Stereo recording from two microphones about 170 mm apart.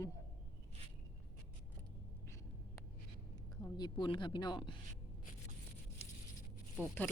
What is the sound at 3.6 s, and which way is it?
Speech, 25° left (ahead or behind).